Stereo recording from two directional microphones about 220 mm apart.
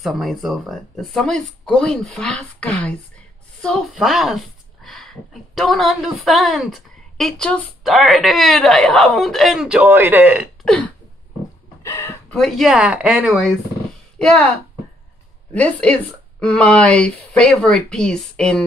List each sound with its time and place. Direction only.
0.0 s a woman's voice: centre (ahead or behind)
10.6 s a sound: 5° left (ahead or behind)
11.8 s speech: 10° left (ahead or behind)
15.5 s a woman's voice: 5° left (ahead or behind)